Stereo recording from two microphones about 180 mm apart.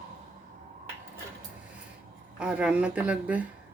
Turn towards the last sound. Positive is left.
turn(degrees=-5)  # may be behind; listen again after turning